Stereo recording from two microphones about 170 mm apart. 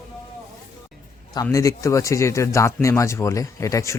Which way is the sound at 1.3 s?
20° left (ahead or behind).